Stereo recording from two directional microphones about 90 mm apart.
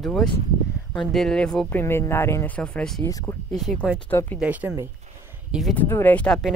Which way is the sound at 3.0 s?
35° left (ahead or behind).